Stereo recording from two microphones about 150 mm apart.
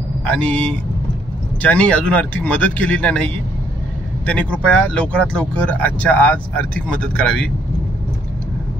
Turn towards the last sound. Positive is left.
turn(degrees=5)  # may be behind; listen again after turning